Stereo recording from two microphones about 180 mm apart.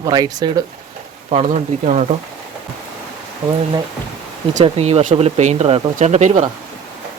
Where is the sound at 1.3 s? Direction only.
40° right (ahead or behind).